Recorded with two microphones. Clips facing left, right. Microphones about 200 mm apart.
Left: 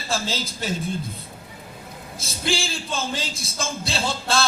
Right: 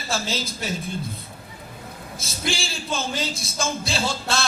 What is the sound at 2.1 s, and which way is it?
A man's voice, 30° left (ahead or behind).